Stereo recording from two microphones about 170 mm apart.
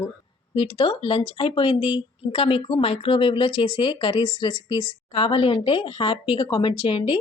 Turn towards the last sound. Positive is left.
turn(degrees=30)  # may be behind; listen again after turning